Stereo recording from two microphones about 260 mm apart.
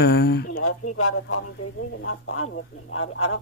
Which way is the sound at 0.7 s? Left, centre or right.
Left.